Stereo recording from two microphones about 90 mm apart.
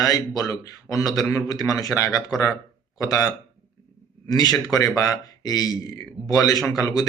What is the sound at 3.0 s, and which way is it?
Speech, 40° left (ahead or behind).